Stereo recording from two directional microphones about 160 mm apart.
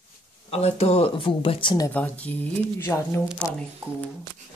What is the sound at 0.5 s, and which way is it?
Speech, 40° left (ahead or behind).